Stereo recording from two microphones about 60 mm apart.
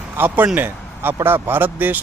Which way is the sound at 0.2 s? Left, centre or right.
Right.